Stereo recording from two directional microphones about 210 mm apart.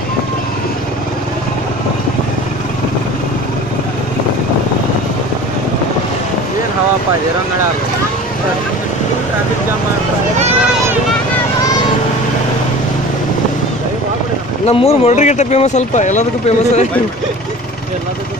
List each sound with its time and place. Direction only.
14.7 s speech: 30° left (ahead or behind)